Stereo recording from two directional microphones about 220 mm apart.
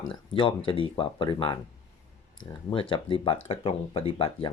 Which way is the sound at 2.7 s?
25° left (ahead or behind).